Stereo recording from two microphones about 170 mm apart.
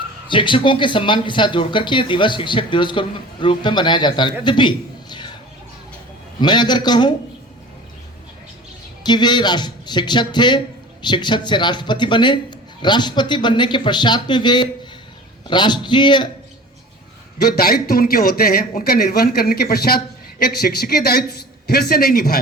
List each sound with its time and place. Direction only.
0.3 s speech: 30° left (ahead or behind)
6.4 s speech: 25° left (ahead or behind)
9.0 s speech: 25° left (ahead or behind)
17.4 s speech: 65° left (ahead or behind)